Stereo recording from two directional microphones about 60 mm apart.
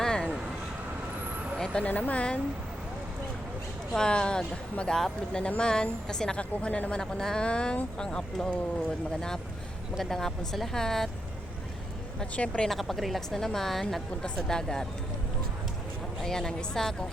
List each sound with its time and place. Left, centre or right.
0.0 s vehicle: centre
1.5 s vehicle: centre
1.8 s speech: left
3.9 s a woman's voice: centre
5.4 s a woman's voice: centre
7.0 s a woman's voice: centre
10.0 s a woman's voice: centre
12.2 s a woman's voice: centre
12.6 s a woman's voice: centre
16.2 s a woman's voice: centre